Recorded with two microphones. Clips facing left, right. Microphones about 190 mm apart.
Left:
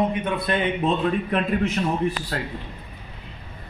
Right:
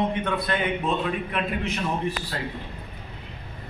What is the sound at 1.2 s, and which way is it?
Speech, 40° left (ahead or behind).